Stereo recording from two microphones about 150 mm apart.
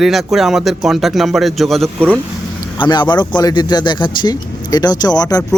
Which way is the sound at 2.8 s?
30° left (ahead or behind).